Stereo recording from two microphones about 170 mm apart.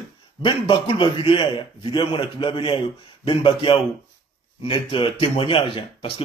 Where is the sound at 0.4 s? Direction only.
25° left (ahead or behind).